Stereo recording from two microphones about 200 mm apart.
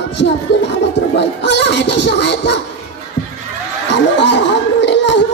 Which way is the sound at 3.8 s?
60° left (ahead or behind).